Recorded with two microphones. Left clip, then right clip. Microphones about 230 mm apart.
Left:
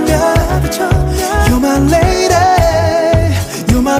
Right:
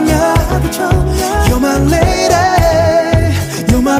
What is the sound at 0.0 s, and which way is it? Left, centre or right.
Music, centre.